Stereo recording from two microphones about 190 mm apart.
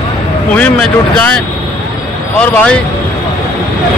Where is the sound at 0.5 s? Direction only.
5° left (ahead or behind).